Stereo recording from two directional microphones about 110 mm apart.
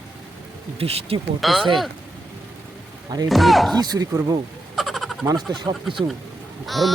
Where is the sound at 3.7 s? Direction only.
35° right (ahead or behind).